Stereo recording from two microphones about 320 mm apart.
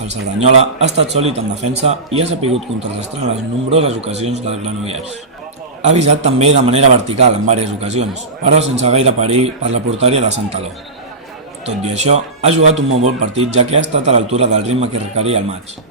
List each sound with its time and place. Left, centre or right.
0.3 s speech: centre
3.7 s speech: centre
11.6 s speech: centre